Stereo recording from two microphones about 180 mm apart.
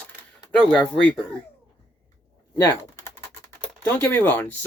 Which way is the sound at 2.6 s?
15° left (ahead or behind).